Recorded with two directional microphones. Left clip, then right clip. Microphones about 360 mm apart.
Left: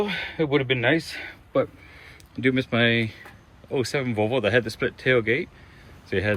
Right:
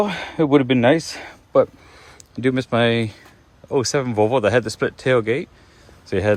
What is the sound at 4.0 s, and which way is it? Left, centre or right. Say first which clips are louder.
Speech: right 7 dB; right.